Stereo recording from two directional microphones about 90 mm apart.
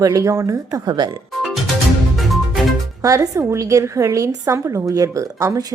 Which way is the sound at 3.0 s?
40° right (ahead or behind).